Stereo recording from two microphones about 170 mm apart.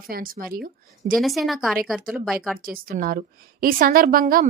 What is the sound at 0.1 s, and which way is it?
A woman's voice, 60° right (ahead or behind).